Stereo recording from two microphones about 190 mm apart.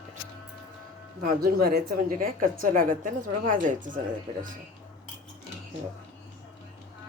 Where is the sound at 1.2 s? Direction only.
50° right (ahead or behind).